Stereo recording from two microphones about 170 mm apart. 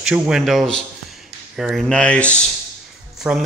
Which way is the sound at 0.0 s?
5° right (ahead or behind).